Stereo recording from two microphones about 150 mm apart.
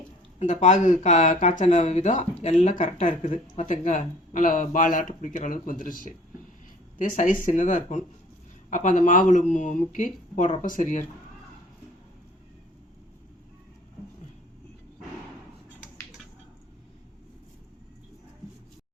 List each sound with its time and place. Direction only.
0.3 s speech: 50° left (ahead or behind)
7.4 s speech: 60° left (ahead or behind)